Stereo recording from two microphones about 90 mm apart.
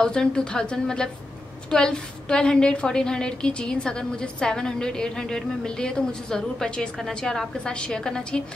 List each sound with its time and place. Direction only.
0.0 s a woman's voice: 10° left (ahead or behind)